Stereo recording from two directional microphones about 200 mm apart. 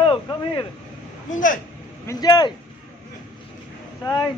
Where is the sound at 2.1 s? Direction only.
20° left (ahead or behind).